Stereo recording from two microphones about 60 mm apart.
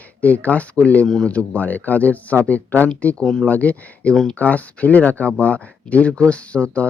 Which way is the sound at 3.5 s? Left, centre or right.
Left.